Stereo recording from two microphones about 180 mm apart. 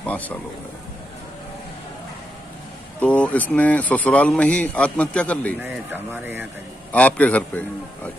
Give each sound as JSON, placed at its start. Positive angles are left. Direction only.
{"t": 0.0, "sound": "speech", "side_deg": 10}
{"t": 3.0, "sound": "speech", "side_deg": 10}
{"t": 5.6, "sound": "speech", "side_deg": -10}
{"t": 6.9, "sound": "speech", "side_deg": 10}